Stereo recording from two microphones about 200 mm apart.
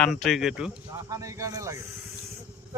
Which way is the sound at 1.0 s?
15° right (ahead or behind).